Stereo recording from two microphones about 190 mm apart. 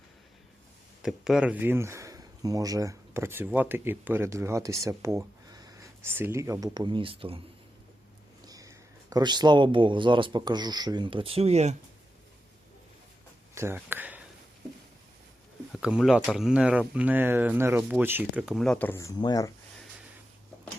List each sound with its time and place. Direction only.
1.0 s speech: 5° right (ahead or behind); by 7.3 s 30° right (ahead or behind)
8.4 s speech: 20° right (ahead or behind); by 11.8 s 35° right (ahead or behind)
13.5 s a sound: 15° right (ahead or behind)
15.7 s speech: 5° right (ahead or behind); by 19.5 s 20° left (ahead or behind)